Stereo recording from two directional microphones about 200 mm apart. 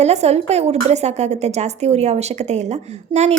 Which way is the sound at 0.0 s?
35° right (ahead or behind).